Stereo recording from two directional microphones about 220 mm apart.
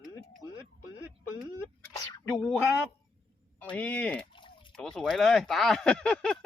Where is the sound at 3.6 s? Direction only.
5° left (ahead or behind).